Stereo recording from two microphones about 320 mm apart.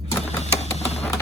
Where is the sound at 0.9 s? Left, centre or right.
Centre.